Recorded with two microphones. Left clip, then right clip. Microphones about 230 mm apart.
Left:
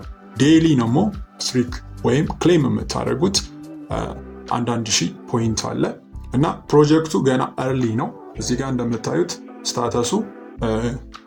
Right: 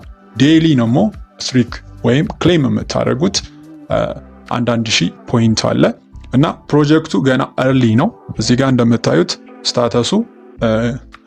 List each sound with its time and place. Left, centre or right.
0.3 s a man's voice: right
5.6 s speech: right
6.4 s speech: right
7.7 s speech: right
9.2 s speech: right